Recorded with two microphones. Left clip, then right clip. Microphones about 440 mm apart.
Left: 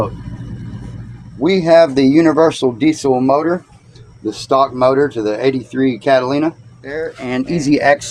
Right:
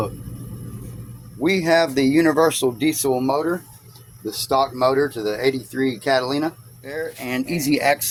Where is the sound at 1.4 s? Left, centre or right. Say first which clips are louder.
Left 8 dB; right.